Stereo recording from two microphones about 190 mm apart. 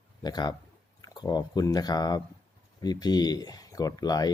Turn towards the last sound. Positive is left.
turn(degrees=20)  # may be behind; listen again after turning